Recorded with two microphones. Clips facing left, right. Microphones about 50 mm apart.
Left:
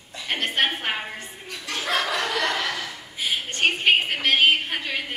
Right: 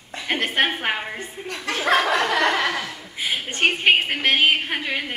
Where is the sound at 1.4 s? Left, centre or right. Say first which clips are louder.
Right 9 dB; right.